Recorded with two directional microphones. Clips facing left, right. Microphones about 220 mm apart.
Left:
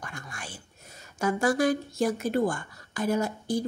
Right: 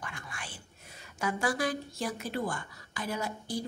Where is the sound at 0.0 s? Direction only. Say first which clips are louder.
Left 3 dB; 45° left (ahead or behind).